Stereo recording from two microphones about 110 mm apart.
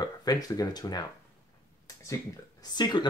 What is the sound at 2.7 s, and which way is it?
Speech, 40° left (ahead or behind).